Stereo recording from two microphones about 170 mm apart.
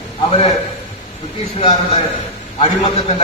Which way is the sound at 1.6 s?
30° left (ahead or behind).